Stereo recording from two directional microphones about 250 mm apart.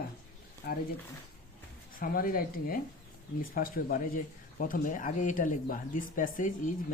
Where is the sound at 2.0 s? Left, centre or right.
Left.